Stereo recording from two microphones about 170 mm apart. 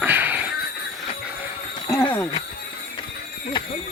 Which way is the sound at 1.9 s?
15° left (ahead or behind).